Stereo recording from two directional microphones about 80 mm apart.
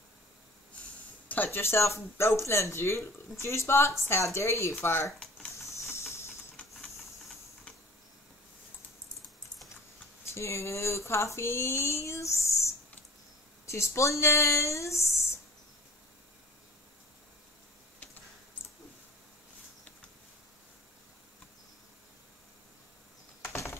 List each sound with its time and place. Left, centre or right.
1.3 s speech: left
10.3 s speech: left
23.4 s a sound: left